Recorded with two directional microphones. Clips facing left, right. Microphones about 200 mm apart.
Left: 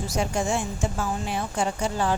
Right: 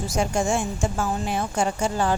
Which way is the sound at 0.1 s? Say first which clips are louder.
Right 3 dB; 45° right (ahead or behind).